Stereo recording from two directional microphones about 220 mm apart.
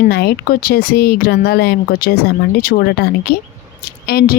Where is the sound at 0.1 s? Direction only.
45° left (ahead or behind).